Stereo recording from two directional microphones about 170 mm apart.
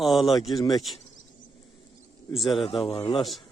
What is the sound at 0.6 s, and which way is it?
Speech, 25° left (ahead or behind).